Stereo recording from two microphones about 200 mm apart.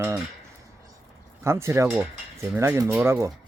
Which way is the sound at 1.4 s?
15° right (ahead or behind).